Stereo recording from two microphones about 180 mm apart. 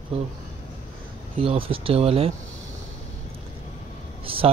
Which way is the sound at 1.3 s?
30° right (ahead or behind).